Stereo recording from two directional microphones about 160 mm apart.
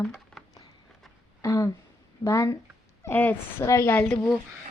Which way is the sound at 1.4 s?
20° left (ahead or behind).